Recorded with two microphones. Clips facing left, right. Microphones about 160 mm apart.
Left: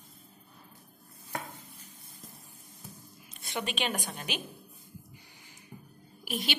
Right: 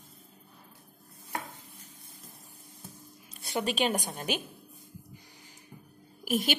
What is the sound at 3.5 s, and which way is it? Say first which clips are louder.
Speech: right 5 dB; 40° right (ahead or behind).